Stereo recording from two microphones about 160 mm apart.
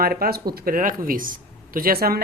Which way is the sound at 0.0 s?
65° right (ahead or behind).